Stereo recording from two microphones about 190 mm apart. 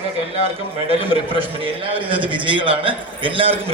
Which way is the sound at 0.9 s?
30° right (ahead or behind).